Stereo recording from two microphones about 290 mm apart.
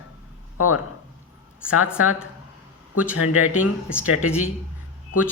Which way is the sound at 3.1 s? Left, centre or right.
Left.